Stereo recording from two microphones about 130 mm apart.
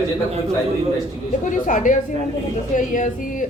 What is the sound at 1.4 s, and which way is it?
A woman's voice, 80° left.